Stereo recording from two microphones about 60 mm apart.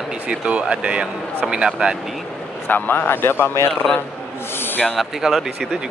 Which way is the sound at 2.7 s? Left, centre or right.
Left.